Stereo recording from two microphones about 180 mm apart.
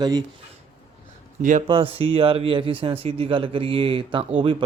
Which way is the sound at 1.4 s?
45° right (ahead or behind).